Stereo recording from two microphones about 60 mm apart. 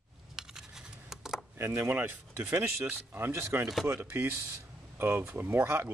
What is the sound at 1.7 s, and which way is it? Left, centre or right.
Speech, right.